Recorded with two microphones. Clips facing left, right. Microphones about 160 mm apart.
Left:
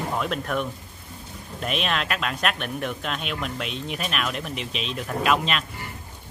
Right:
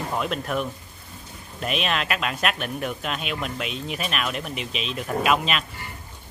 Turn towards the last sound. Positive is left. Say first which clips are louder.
# right 1 dB
turn(degrees=-5)  # may be behind; listen again after turning